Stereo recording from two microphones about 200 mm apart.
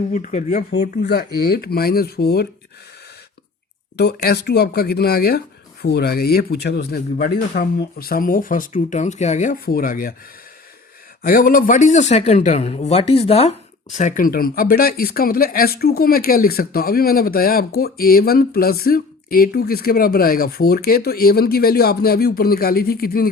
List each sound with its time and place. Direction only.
0.1 s speech: 40° left (ahead or behind)
0.7 s speech: 55° left (ahead or behind)
3.9 s speech: 55° left (ahead or behind)
11.2 s speech: 45° left (ahead or behind)